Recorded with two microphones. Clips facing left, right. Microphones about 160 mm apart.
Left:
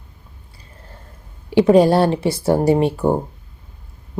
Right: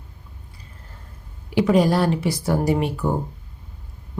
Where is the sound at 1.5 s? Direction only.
30° left (ahead or behind).